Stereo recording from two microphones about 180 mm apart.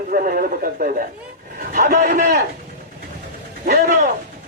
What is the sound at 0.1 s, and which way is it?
Speech, 50° right (ahead or behind).